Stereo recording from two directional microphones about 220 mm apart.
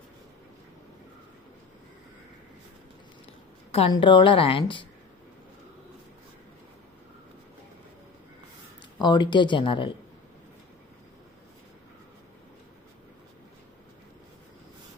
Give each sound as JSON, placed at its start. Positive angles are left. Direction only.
{"t": 3.7, "sound": "a woman's voice", "side_deg": 25}
{"t": 9.0, "sound": "a woman's voice", "side_deg": 20}